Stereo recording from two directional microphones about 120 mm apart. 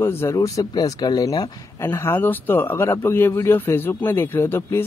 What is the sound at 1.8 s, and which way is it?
Speech, 20° left (ahead or behind).